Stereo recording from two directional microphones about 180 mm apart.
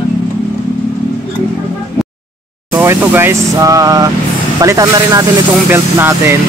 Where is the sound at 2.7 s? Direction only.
10° right (ahead or behind).